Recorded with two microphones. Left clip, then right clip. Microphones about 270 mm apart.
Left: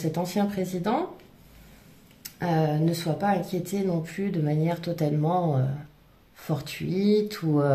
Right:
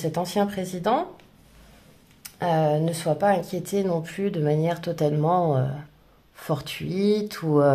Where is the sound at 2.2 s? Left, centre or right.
Right.